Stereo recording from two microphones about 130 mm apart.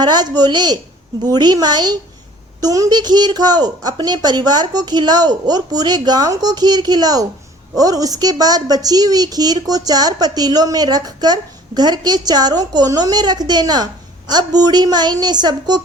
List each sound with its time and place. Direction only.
0.0 s a woman's voice: 35° right (ahead or behind)